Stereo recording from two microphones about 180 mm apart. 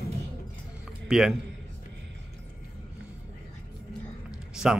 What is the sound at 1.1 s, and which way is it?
Speech, 5° right (ahead or behind).